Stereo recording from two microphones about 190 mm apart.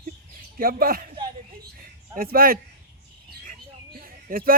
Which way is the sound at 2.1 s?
50° right (ahead or behind).